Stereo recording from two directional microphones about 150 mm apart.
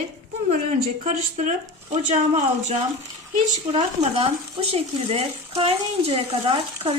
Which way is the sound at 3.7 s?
35° right (ahead or behind).